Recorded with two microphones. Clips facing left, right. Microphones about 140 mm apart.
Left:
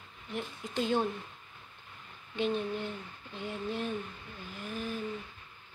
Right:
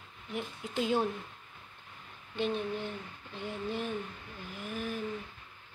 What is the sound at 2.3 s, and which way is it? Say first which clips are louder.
Speech: left 1 dB; centre (ahead or behind).